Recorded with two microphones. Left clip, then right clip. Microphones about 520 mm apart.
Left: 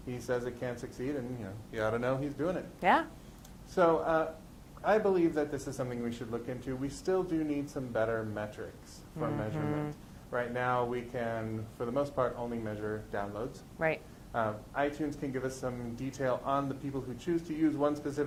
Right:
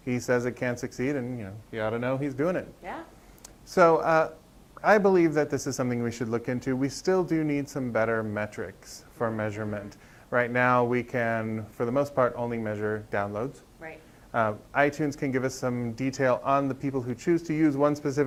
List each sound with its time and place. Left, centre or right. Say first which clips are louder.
0.1 s speech: right 8 dB; right
3.8 s speech: right 7 dB; right
10.3 s speech: right 9 dB; right
13.8 s speech: left 11 dB; left
14.3 s speech: right 8 dB; right